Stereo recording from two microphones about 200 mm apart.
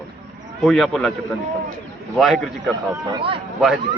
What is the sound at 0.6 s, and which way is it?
Speech, centre (ahead or behind).